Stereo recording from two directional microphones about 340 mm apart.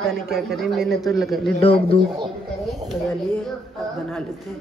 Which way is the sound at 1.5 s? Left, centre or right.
Centre.